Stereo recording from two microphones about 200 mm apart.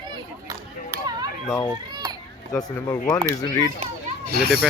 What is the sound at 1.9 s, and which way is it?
Children playing, 20° right (ahead or behind).